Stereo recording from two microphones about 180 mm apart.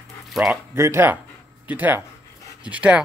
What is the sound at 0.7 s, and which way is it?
Speech, 15° right (ahead or behind).